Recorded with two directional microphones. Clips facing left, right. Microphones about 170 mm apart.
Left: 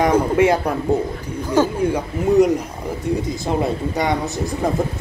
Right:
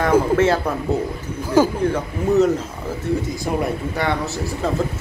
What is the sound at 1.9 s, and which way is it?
A man's voice, 15° left (ahead or behind).